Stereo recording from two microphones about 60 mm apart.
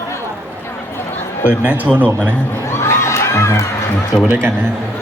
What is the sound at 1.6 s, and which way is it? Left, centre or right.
Speech, right.